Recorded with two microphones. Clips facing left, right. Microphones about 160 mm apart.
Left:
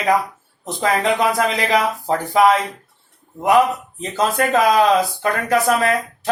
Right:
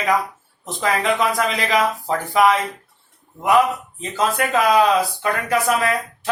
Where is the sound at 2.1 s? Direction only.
35° left (ahead or behind).